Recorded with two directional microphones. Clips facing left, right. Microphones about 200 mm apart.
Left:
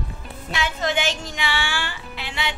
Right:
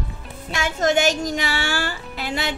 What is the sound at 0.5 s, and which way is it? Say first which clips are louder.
Speech: right 5 dB; 45° right (ahead or behind).